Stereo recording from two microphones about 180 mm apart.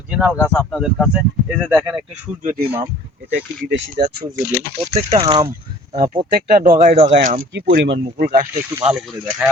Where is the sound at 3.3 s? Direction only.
85° right.